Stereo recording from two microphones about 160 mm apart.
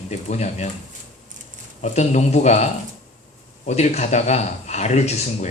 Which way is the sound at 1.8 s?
45° left (ahead or behind).